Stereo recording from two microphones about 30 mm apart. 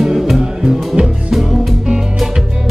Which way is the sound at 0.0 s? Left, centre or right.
Centre.